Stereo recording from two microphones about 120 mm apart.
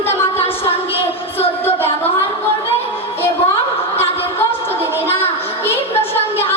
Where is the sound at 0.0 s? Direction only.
20° left (ahead or behind).